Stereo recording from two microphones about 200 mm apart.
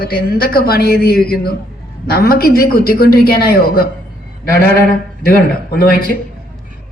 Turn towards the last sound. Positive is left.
turn(degrees=45)  # may be behind; listen again after turning